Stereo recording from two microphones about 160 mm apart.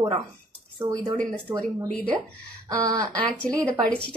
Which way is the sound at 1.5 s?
30° right (ahead or behind).